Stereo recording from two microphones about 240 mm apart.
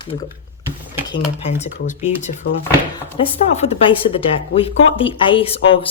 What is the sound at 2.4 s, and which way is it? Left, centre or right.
Speech, left.